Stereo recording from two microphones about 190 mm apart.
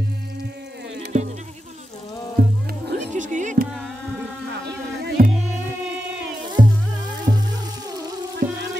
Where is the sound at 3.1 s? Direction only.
40° right (ahead or behind).